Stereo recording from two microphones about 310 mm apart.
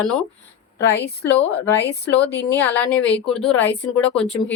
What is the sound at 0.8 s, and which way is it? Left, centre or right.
Speech, left.